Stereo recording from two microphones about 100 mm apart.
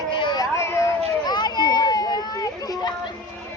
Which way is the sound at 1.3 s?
45° left (ahead or behind).